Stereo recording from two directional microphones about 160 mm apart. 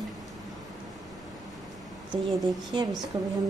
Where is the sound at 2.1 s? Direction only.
25° right (ahead or behind).